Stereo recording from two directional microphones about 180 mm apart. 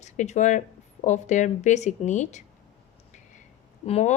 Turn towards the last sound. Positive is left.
turn(degrees=35)  # may be behind; listen again after turning